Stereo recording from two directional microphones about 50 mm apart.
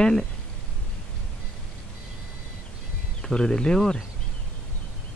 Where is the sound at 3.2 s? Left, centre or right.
Centre.